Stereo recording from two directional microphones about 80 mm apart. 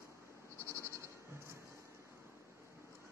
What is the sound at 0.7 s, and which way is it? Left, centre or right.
Sheep, right.